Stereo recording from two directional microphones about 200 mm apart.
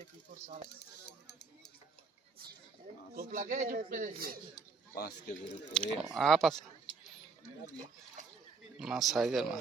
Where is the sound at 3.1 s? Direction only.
40° right (ahead or behind).